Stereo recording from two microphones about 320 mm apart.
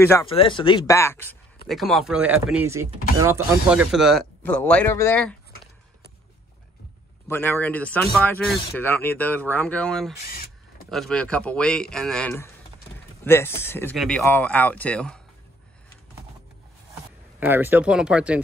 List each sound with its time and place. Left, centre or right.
0.0 s speech: centre
7.2 s speech: centre
10.2 s speech: left
10.9 s speech: centre
17.4 s speech: centre